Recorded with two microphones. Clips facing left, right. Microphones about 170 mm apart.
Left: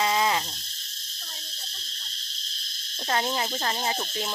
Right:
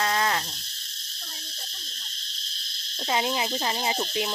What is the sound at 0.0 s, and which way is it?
Cricket, 10° left (ahead or behind).